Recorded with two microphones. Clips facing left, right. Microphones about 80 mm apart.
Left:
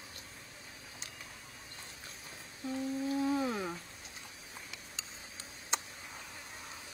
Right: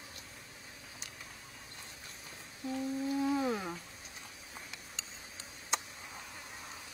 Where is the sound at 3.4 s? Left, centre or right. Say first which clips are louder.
Right 1 dB; centre.